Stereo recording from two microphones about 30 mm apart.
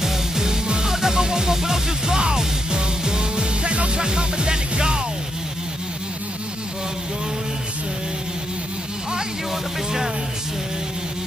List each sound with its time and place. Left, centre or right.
0.0 s music: centre